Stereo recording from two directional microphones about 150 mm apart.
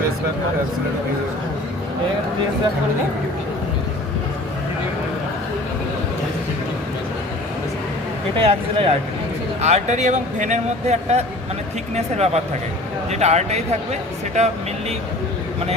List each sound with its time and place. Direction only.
8.4 s speech: 40° right (ahead or behind)